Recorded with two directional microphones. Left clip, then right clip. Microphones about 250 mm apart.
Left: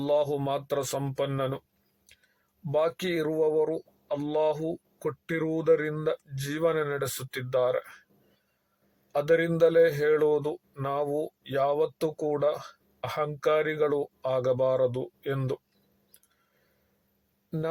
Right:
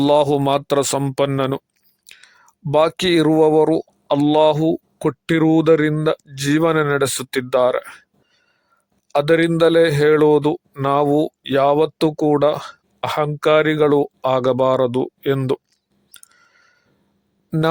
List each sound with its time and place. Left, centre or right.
0.0 s a man's voice: right
2.7 s a man's voice: right
9.1 s a man's voice: right